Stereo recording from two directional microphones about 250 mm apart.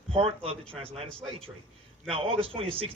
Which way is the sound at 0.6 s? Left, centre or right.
Centre.